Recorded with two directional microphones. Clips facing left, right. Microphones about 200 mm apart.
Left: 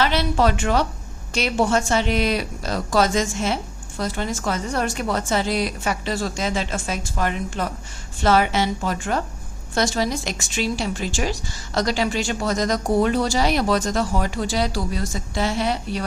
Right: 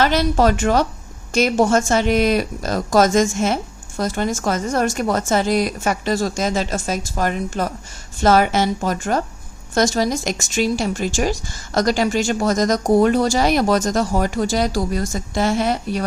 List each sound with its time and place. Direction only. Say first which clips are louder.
0.0 s speech: right 4 dB; 45° right (ahead or behind)